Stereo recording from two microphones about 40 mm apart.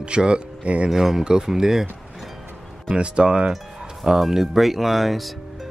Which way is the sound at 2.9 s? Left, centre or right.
Right.